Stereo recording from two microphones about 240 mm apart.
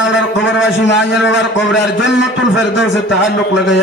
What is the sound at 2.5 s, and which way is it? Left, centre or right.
Speech, left.